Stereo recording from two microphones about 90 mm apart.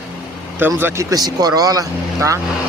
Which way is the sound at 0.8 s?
25° right (ahead or behind).